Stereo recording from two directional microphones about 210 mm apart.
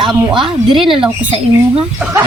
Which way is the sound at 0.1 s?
Centre (ahead or behind).